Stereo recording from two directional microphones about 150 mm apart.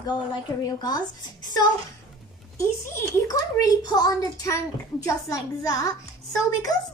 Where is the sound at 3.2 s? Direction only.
25° left (ahead or behind).